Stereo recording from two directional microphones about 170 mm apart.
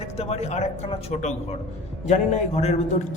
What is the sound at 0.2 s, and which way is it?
A man's voice, 40° left (ahead or behind).